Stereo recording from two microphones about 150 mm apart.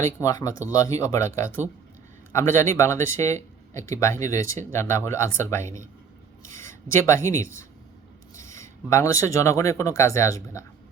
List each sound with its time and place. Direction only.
0.0 s speech: 20° left (ahead or behind)
2.3 s speech: 20° left (ahead or behind)
6.9 s speech: 20° left (ahead or behind)